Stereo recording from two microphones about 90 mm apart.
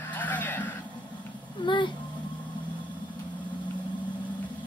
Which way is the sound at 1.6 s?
60° left (ahead or behind).